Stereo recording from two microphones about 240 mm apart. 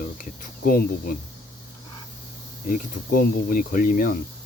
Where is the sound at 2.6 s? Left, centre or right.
Left.